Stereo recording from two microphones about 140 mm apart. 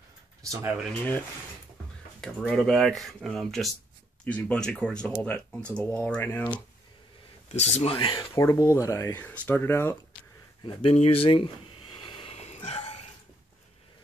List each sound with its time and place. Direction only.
0.5 s speech: 20° right (ahead or behind)
2.4 s speech: centre (ahead or behind)
7.4 s speech: 55° left (ahead or behind)
7.9 s speech: 35° left (ahead or behind)
8.4 s speech: 20° left (ahead or behind)
9.2 s speech: 10° left (ahead or behind)
10.6 s speech: 35° left (ahead or behind)
11.0 s a sound: 40° left (ahead or behind)